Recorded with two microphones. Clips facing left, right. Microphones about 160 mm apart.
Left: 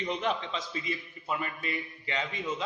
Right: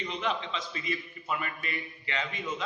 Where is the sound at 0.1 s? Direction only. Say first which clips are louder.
Left 2 dB; 45° left (ahead or behind).